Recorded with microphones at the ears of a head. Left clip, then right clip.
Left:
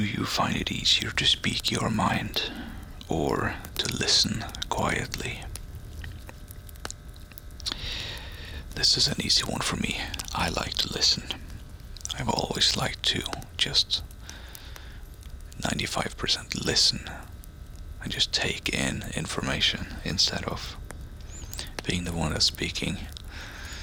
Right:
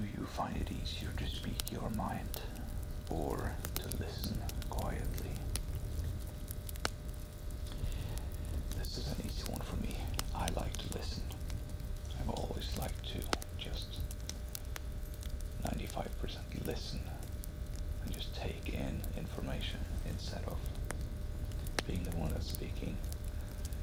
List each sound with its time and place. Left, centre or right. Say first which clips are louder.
0.0 s speech: left 13 dB; left
7.6 s speech: left 19 dB; left
15.5 s speech: left 13 dB; left
21.8 s speech: left 13 dB; left